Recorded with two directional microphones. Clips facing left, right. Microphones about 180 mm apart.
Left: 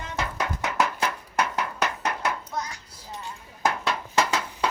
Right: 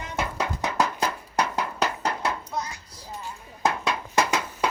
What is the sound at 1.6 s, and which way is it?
Music, 30° right (ahead or behind).